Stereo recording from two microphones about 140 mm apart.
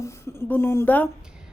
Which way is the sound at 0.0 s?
15° left (ahead or behind).